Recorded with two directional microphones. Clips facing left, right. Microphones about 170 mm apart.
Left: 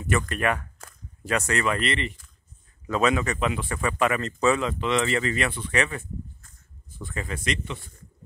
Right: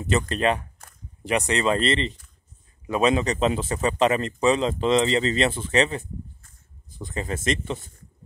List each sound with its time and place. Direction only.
0.0 s speech: 25° right (ahead or behind)
7.4 s a man's voice: 35° right (ahead or behind)